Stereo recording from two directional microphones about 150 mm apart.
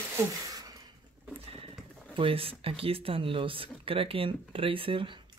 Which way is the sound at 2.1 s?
35° right (ahead or behind).